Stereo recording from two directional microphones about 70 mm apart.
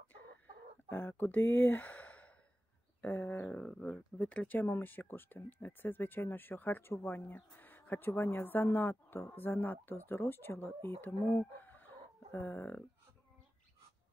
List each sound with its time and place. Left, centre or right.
0.8 s speech: left
4.6 s speech: left